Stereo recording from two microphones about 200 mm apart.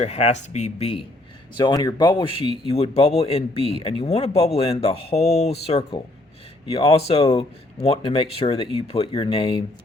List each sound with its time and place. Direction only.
0.0 s speech: 35° left (ahead or behind)
1.5 s speech: 20° left (ahead or behind)